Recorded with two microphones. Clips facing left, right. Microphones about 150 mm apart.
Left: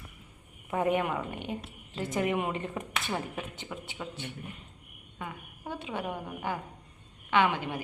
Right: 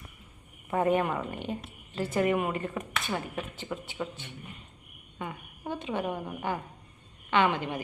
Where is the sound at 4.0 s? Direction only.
5° right (ahead or behind).